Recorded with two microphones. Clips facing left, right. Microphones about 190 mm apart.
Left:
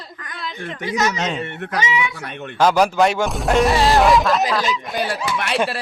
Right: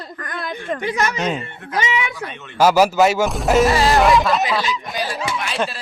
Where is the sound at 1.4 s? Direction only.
70° left (ahead or behind).